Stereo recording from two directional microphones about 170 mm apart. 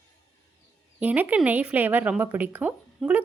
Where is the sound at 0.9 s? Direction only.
10° right (ahead or behind).